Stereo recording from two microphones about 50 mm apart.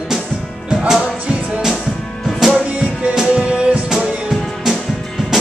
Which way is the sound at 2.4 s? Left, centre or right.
Centre.